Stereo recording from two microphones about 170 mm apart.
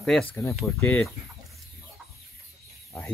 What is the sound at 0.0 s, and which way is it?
Speech, 5° left (ahead or behind).